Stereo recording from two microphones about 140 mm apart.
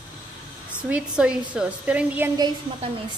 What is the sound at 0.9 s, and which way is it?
A woman's voice, 5° right (ahead or behind).